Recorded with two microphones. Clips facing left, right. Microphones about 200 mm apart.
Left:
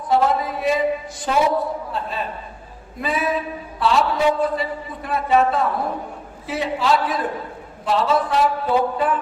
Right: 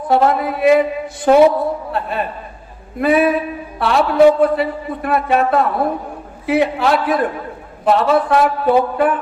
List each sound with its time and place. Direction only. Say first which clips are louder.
0.1 s a man's voice: right 4 dB; 60° right (ahead or behind)